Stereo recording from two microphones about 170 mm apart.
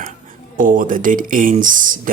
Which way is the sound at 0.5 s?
50° right (ahead or behind).